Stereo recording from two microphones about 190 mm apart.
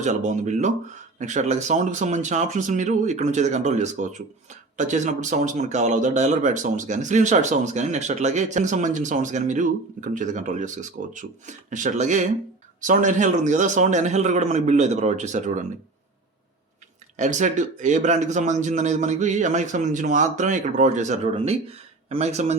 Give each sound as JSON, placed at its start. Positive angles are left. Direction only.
{"t": 0.0, "sound": "speech", "side_deg": -40}
{"t": 17.2, "sound": "speech", "side_deg": -40}